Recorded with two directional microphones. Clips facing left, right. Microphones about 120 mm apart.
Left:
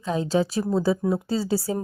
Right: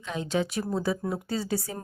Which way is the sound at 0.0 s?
35° left (ahead or behind).